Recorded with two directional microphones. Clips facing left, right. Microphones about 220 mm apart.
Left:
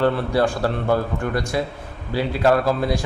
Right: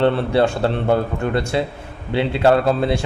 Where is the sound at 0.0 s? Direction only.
25° right (ahead or behind).